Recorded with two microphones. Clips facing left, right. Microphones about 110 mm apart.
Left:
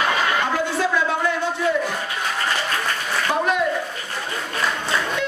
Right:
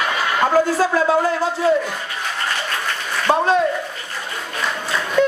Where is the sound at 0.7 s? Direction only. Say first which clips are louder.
Right 5 dB; 40° right (ahead or behind).